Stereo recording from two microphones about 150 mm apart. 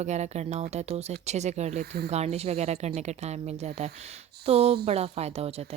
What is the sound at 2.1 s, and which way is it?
Speech, 45° right (ahead or behind).